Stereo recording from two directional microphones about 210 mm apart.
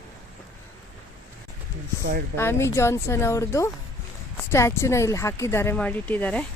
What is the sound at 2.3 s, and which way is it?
Speech, 10° left (ahead or behind).